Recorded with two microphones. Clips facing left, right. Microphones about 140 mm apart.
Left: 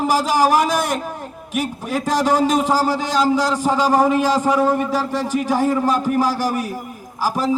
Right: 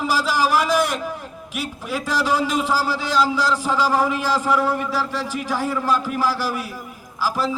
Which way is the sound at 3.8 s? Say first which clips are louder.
Left 4 dB; 20° left (ahead or behind).